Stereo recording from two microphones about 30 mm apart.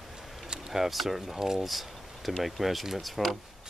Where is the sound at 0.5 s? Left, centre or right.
Centre.